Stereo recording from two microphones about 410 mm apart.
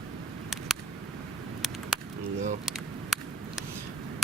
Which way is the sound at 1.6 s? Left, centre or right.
Centre.